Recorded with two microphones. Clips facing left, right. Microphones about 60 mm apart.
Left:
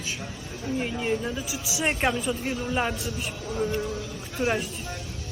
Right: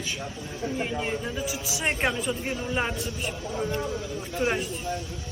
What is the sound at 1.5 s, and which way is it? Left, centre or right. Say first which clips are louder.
A woman's voice: left 1 dB; right.